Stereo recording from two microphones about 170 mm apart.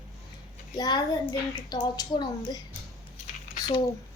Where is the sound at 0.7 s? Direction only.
25° left (ahead or behind).